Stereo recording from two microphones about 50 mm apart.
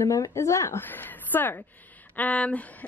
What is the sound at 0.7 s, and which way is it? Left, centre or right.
Speech, left.